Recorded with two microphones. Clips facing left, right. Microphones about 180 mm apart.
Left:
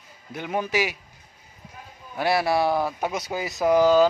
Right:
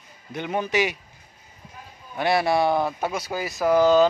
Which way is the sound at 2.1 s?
5° left (ahead or behind).